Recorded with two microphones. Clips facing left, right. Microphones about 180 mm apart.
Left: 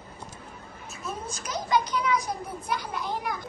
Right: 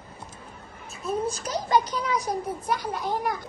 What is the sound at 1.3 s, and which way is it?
A child's voice, 35° right (ahead or behind).